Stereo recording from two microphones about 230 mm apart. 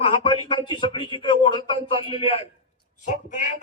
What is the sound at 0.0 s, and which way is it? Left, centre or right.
A man's voice, left.